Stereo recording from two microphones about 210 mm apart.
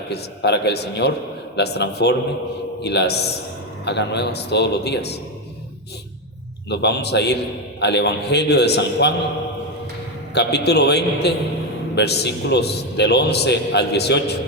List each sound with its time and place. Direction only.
0.1 s a man's voice: 55° left (ahead or behind)
6.7 s a man's voice: 50° left (ahead or behind)
10.3 s a man's voice: 50° left (ahead or behind)